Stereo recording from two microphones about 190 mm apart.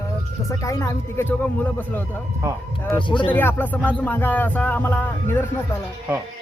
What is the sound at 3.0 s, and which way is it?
Speech, 25° left (ahead or behind).